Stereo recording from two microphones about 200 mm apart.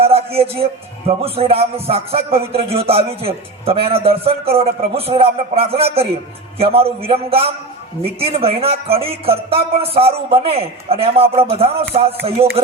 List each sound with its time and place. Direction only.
0.0 s a man's voice: 30° right (ahead or behind)